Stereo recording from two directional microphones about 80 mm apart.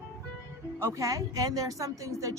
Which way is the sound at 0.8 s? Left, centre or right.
Right.